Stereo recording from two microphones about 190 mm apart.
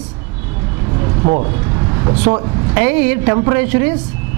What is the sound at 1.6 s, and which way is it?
Vehicle, 25° right (ahead or behind).